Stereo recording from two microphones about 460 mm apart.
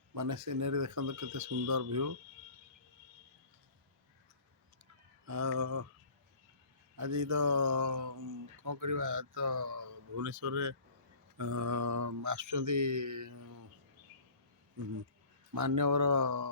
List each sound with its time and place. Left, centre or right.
0.1 s speech: right
5.2 s speech: right
6.9 s speech: right
15.5 s speech: right